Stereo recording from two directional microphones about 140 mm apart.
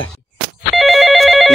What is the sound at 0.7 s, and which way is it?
Telephone bell ringing, centre (ahead or behind).